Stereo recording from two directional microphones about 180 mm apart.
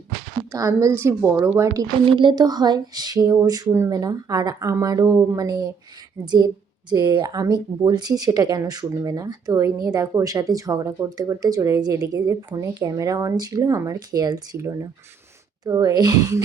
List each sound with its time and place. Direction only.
0.5 s a woman's voice: 15° right (ahead or behind)
2.0 s speech: 25° right (ahead or behind)